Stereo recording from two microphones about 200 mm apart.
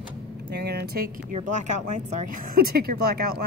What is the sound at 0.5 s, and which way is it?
Speech, 55° right (ahead or behind).